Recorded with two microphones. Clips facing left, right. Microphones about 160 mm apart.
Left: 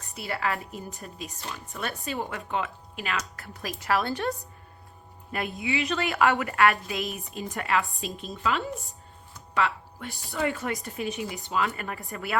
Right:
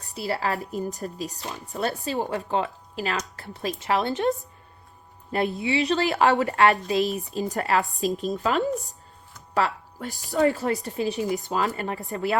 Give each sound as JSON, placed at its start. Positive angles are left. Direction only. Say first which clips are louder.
{"t": 0.0, "sound": "speech", "louder": "right 3 dB", "side_deg": -35}
{"t": 5.5, "sound": "speech", "louder": "right 2 dB", "side_deg": -35}
{"t": 9.6, "sound": "music", "louder": "right 2 dB", "side_deg": -40}
{"t": 10.3, "sound": "speech", "louder": "right 7 dB", "side_deg": -35}